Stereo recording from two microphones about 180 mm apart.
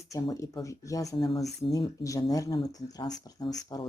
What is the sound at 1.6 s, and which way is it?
Speech, 30° left (ahead or behind).